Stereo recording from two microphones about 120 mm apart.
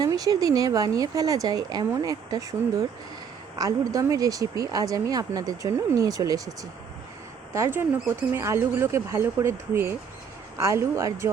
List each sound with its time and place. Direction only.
0.0 s speech: 30° right (ahead or behind)
7.5 s speech: 20° right (ahead or behind)